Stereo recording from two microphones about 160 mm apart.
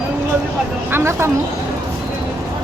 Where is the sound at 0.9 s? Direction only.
15° right (ahead or behind).